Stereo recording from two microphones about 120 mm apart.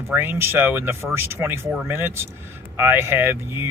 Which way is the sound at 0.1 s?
15° right (ahead or behind).